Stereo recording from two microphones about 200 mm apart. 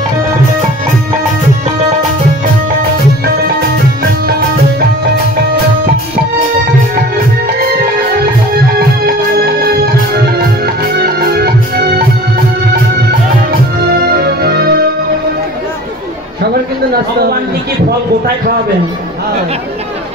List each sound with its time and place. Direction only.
7.4 s music: 45° right (ahead or behind)
9.7 s music: 50° right (ahead or behind)
11.0 s organ: 50° right (ahead or behind)
14.0 s music: 50° right (ahead or behind)